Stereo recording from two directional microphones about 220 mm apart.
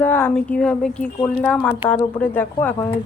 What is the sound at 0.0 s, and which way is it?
Speech, 10° left (ahead or behind).